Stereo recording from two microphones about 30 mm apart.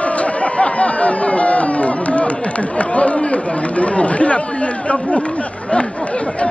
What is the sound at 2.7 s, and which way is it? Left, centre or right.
Speech, left.